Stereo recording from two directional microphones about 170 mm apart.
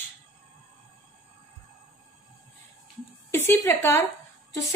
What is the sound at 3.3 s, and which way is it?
Speech, 15° left (ahead or behind).